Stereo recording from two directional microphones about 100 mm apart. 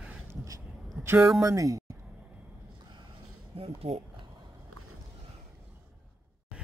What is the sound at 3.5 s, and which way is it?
Speech, 75° right (ahead or behind).